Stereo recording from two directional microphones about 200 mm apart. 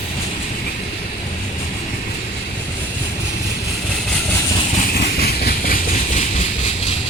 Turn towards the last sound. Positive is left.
turn(degrees=35)  # may be behind; listen again after turning